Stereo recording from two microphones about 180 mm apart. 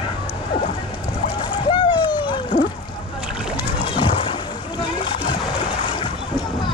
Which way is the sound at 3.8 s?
30° left (ahead or behind).